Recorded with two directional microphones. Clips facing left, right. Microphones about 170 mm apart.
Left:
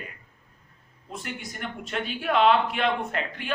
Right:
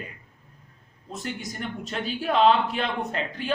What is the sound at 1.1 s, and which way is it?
A man's voice, 40° right (ahead or behind).